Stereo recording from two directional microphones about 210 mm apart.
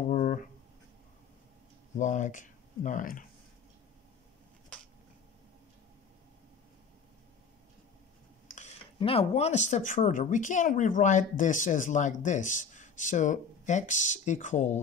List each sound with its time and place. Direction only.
0.1 s a sound: 40° left (ahead or behind)
2.0 s speech: 35° left (ahead or behind)
8.5 s speech: 35° left (ahead or behind)